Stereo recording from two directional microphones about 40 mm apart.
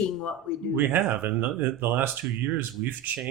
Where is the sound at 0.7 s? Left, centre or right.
Right.